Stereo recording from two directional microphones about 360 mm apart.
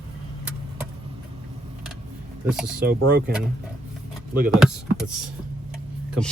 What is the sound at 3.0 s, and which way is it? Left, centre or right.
Speech, right.